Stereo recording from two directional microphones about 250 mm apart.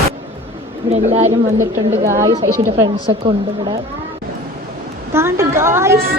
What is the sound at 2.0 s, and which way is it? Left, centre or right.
Speech, centre.